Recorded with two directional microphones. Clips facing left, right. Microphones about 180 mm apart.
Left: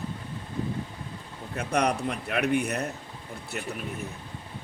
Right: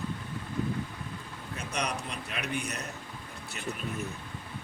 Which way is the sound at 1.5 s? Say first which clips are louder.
Left 8 dB; 55° left (ahead or behind).